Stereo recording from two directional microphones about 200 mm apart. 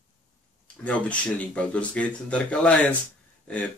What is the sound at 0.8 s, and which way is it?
Speech, 5° left (ahead or behind).